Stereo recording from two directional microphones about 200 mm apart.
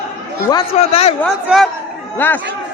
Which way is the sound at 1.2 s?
Centre (ahead or behind).